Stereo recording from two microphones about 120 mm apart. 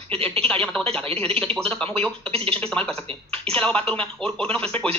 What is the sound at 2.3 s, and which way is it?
Speech, 50° right (ahead or behind).